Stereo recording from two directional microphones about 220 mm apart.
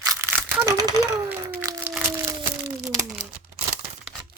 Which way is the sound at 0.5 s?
15° right (ahead or behind).